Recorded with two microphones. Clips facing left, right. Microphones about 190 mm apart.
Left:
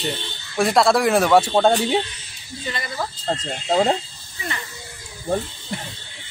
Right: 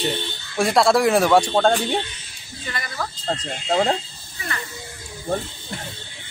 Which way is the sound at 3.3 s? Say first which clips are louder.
Left 1 dB; 5° left (ahead or behind).